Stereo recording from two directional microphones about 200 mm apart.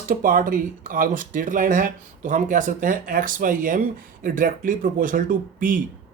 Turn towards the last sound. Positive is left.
turn(degrees=-45)  # may be behind; listen again after turning